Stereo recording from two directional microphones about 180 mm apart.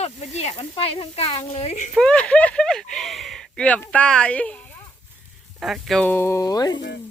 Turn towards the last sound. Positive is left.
turn(degrees=20)  # may be behind; listen again after turning